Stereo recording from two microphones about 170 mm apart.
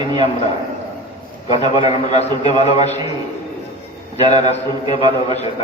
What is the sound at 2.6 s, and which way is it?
Speech, 40° left (ahead or behind).